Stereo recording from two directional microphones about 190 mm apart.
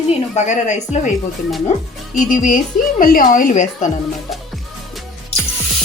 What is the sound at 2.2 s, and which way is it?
Frying, 45° left (ahead or behind).